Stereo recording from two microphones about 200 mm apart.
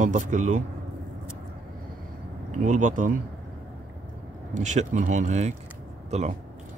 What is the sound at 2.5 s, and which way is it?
Speech, 40° right (ahead or behind).